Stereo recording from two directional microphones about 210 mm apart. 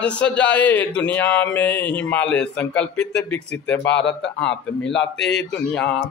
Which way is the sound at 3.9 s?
55° left (ahead or behind).